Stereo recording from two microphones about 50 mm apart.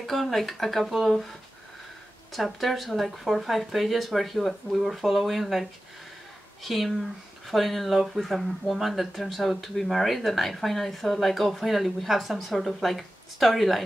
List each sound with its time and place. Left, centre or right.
0.0 s speech: centre
2.3 s speech: centre